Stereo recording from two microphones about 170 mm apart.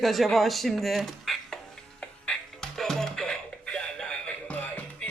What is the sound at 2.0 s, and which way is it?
Music, 5° left (ahead or behind).